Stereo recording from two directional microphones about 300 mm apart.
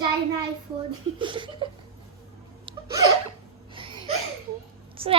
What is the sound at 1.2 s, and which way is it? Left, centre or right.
Speech, centre.